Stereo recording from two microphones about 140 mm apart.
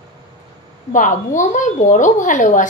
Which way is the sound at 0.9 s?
65° left (ahead or behind).